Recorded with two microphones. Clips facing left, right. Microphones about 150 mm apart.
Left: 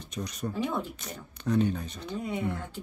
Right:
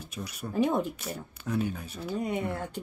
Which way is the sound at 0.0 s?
10° right (ahead or behind).